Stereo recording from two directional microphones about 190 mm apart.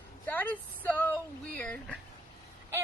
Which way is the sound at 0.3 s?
10° left (ahead or behind).